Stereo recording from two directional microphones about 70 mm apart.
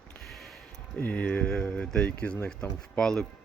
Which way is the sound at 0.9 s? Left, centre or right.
Left.